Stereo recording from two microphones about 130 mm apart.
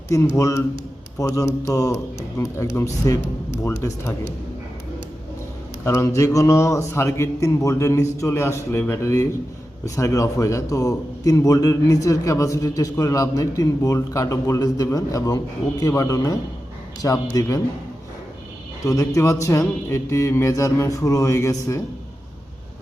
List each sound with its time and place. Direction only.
0.1 s a man's voice: 25° left (ahead or behind)
5.8 s a man's voice: 20° left (ahead or behind)
18.9 s a man's voice: 25° left (ahead or behind)